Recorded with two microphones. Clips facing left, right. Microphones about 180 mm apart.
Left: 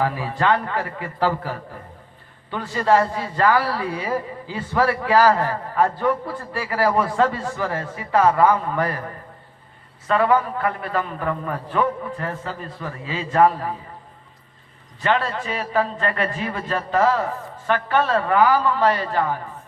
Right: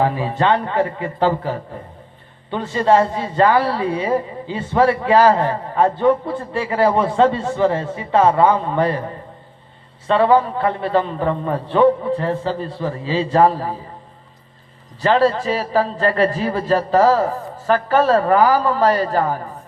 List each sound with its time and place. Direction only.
0.0 s speech: 25° right (ahead or behind)
15.0 s a man's voice: 35° right (ahead or behind)